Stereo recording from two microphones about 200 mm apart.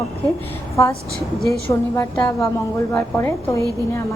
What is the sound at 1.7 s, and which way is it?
A woman's voice, 15° left (ahead or behind).